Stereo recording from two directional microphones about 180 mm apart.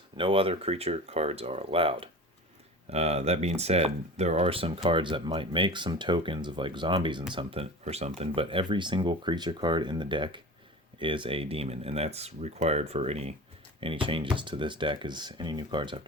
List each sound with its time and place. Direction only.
0.2 s speech: 30° right (ahead or behind)